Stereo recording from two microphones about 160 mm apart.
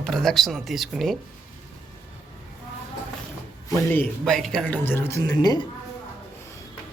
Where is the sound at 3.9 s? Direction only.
10° left (ahead or behind); by 5.7 s 25° left (ahead or behind).